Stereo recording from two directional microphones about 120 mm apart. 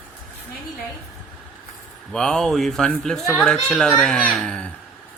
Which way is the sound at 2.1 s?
5° left (ahead or behind).